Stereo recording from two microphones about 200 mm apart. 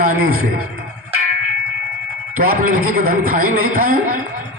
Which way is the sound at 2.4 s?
45° right (ahead or behind).